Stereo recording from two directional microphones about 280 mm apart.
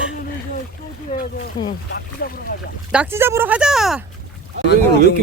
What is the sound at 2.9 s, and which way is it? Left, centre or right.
Speech, centre.